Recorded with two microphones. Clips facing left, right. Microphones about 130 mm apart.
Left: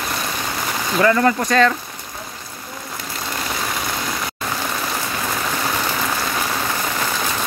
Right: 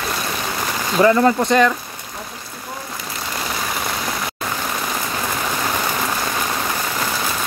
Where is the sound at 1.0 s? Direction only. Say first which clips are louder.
Right 2 dB; 20° right (ahead or behind).